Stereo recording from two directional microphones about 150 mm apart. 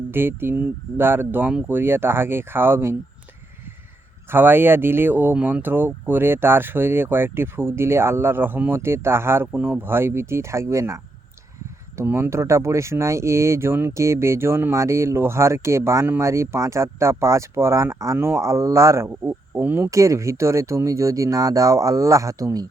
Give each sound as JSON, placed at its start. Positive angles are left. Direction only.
{"t": 0.1, "sound": "speech", "side_deg": -15}
{"t": 4.3, "sound": "speech", "side_deg": -15}